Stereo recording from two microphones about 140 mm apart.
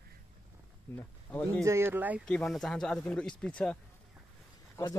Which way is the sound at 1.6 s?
15° right (ahead or behind).